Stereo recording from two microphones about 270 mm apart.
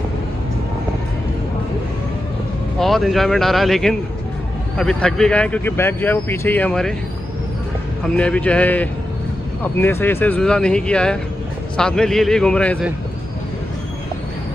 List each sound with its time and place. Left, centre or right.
2.8 s speech: centre
8.2 s speech: centre